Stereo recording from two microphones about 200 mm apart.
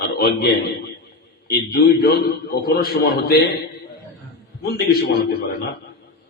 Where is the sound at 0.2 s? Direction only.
50° left (ahead or behind).